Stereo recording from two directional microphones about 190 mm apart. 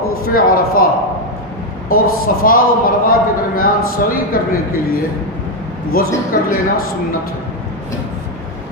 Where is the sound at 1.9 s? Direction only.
50° left (ahead or behind).